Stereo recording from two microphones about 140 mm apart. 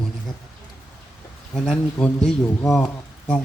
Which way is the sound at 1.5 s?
5° left (ahead or behind).